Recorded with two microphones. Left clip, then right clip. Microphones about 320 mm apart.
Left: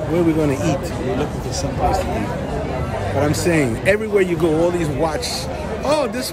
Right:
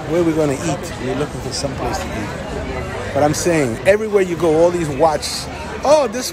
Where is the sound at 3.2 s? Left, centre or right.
Centre.